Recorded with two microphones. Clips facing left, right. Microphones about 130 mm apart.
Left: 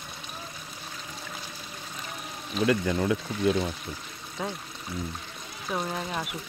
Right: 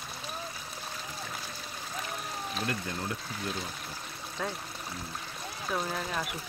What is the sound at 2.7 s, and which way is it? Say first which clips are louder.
Speech: left 10 dB; 90° left.